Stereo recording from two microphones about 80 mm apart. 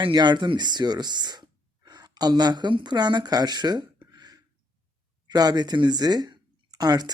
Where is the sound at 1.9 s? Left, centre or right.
Right.